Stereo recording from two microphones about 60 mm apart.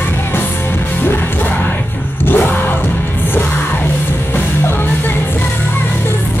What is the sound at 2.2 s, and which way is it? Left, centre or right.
Music, left.